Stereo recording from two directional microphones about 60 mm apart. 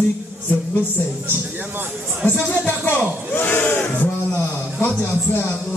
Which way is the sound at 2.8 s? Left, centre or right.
Left.